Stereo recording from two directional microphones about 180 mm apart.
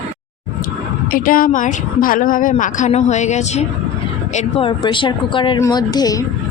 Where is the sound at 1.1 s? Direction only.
50° left (ahead or behind); by 6.2 s 20° left (ahead or behind).